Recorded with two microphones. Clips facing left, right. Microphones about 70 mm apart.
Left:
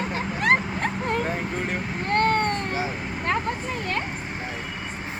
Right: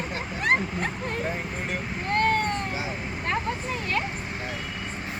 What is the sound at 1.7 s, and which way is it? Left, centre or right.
Vehicle, left.